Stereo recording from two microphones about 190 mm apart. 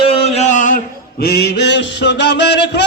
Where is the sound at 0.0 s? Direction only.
30° left (ahead or behind).